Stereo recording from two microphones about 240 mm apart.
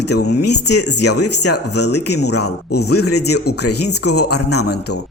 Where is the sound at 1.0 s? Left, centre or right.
Left.